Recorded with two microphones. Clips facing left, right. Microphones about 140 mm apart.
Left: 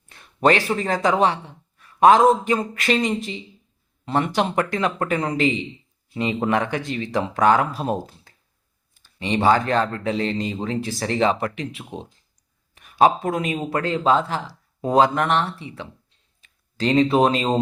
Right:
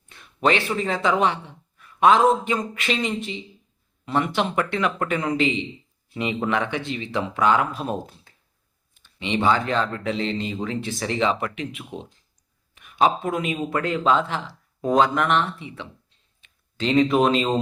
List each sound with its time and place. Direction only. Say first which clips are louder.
0.4 s speech: left 3 dB; 40° left (ahead or behind)